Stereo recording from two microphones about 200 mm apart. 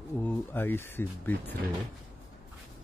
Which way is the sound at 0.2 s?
10° left (ahead or behind).